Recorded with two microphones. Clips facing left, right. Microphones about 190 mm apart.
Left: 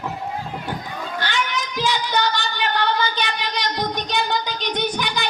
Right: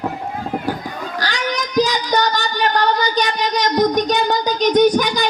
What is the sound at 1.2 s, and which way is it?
Child singing, 35° right (ahead or behind).